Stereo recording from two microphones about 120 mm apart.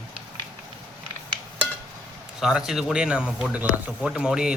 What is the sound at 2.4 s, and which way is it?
Speech, 5° right (ahead or behind).